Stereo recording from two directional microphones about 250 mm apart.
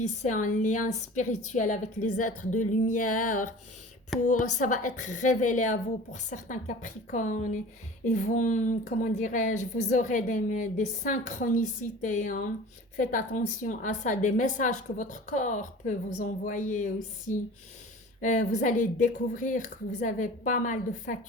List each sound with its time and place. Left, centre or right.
0.0 s a woman's voice: left